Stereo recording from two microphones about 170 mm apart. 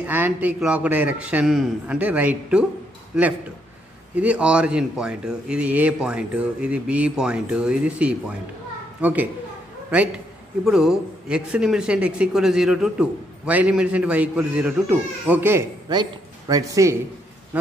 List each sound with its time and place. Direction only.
0.0 s a man's voice: 10° right (ahead or behind)
15.9 s a man's voice: 25° right (ahead or behind)